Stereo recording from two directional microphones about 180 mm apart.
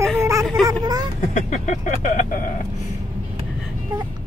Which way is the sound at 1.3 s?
40° left (ahead or behind).